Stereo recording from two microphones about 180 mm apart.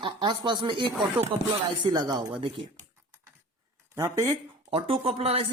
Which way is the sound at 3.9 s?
15° right (ahead or behind).